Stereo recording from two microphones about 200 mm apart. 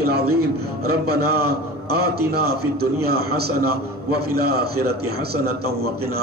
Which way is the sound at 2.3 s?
50° right (ahead or behind).